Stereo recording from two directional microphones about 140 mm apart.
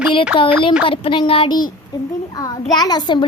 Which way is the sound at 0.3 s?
35° left (ahead or behind).